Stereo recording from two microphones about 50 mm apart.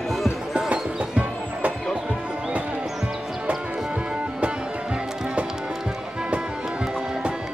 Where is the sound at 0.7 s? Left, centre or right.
Right.